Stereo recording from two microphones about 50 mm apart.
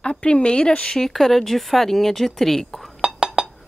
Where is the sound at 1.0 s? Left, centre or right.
Centre.